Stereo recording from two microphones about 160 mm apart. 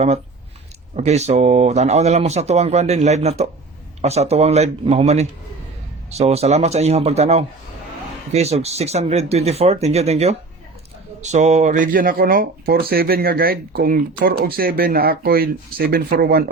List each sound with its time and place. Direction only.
0.9 s a man's voice: 45° right (ahead or behind); by 16.5 s 70° right (ahead or behind)